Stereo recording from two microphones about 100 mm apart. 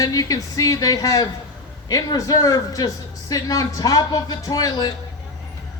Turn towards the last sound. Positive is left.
turn(degrees=45)  # may be behind; listen again after turning